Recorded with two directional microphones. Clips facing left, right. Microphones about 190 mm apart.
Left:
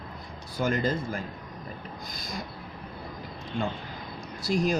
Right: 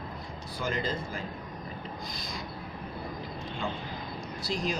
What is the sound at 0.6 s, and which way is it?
Speech, 50° left (ahead or behind).